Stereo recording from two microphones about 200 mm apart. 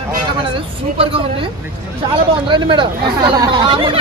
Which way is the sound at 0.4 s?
25° right (ahead or behind).